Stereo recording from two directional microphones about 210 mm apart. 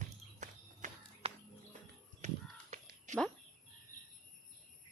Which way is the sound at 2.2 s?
35° right (ahead or behind).